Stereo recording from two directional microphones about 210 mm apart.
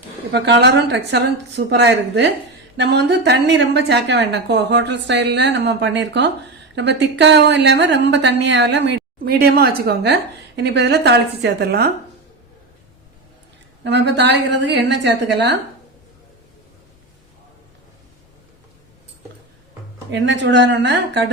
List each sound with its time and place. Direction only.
0.3 s a woman's voice: 55° right (ahead or behind)
13.8 s a woman's voice: 55° right (ahead or behind)
20.1 s a woman's voice: 60° right (ahead or behind)